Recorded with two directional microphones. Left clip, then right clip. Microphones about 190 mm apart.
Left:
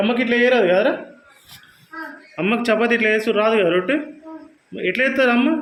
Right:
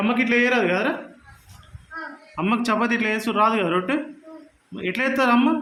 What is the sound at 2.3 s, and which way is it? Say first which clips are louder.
A man's voice: left 4 dB; 15° right (ahead or behind).